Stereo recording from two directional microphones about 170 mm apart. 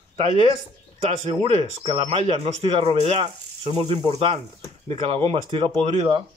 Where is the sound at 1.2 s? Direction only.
35° right (ahead or behind).